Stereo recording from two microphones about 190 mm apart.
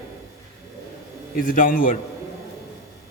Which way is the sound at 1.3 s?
45° left (ahead or behind).